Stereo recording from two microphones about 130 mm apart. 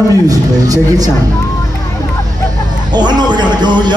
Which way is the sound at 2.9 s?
35° right (ahead or behind).